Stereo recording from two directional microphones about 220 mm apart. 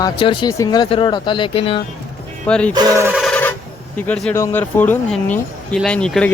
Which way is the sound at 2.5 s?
5° left (ahead or behind).